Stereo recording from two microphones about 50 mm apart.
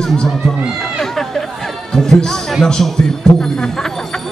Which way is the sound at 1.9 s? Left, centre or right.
Centre.